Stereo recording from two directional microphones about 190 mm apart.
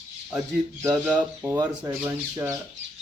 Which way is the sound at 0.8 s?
10° right (ahead or behind).